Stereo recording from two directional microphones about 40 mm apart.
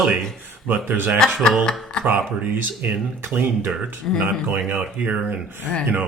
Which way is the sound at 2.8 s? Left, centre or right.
Right.